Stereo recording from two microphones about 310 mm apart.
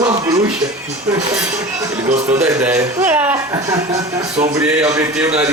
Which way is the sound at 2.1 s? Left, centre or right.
Right.